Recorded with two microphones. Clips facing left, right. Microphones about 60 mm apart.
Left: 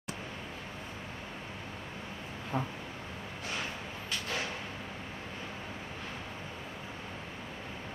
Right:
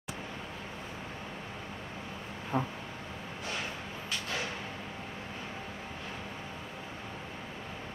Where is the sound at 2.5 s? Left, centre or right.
Centre.